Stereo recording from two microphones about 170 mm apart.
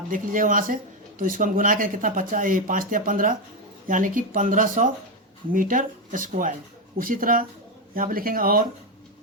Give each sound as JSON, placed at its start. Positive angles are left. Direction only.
{"t": 0.1, "sound": "speech", "side_deg": -50}